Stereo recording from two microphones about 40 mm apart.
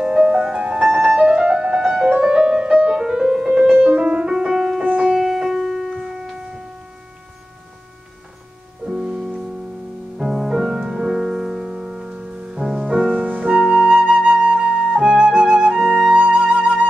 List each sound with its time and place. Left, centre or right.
0.0 s music: right
1.8 s music: centre
2.0 s music: right
3.0 s music: centre
4.3 s music: centre
5.1 s piano: centre
8.8 s music: centre
10.1 s music: centre; by 12.6 s right
12.7 s music: centre
13.0 s music: right
13.5 s flute: right